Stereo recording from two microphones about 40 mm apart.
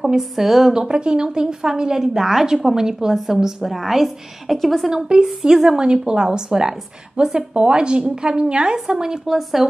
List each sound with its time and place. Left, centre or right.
0.0 s a woman's voice: centre
0.7 s a woman's voice: centre
5.2 s a woman's voice: centre
5.8 s a woman's voice: right
8.7 s a woman's voice: centre